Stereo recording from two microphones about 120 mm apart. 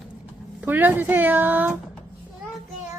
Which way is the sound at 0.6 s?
15° right (ahead or behind).